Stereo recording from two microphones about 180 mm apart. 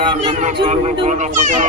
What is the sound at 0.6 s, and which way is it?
Speech, 30° right (ahead or behind).